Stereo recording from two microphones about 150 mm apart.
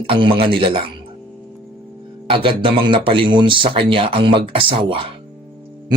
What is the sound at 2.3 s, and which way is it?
Speech, 35° right (ahead or behind).